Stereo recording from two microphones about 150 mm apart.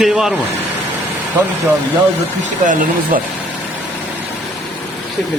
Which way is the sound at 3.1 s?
60° right (ahead or behind).